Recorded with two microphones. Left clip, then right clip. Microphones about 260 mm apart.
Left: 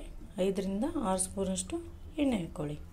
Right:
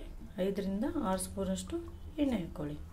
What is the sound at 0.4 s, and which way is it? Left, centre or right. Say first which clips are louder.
A woman's voice: left 3 dB; centre.